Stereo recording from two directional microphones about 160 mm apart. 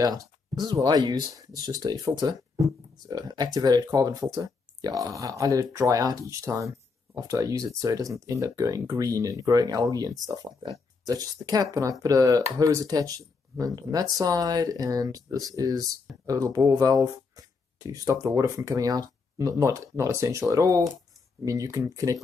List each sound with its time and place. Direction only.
0.0 s speech: 25° right (ahead or behind)